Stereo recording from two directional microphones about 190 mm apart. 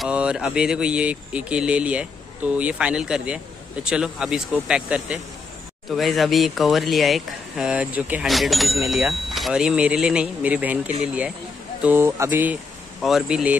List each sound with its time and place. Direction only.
0.0 s speech: 5° right (ahead or behind)
11.8 s speech: 10° right (ahead or behind)